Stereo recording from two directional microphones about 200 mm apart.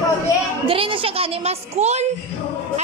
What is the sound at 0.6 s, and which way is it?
A woman's voice, 25° right (ahead or behind).